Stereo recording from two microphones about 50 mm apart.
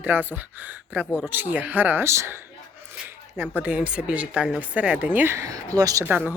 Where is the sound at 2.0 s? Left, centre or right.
Right.